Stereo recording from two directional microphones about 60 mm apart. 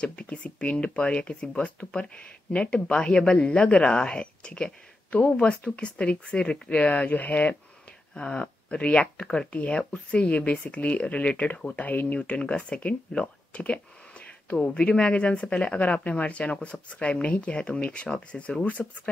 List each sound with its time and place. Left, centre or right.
0.0 s speech: centre
8.1 s speech: centre